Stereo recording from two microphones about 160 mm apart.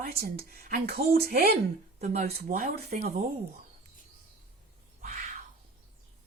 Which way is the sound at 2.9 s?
45° right (ahead or behind).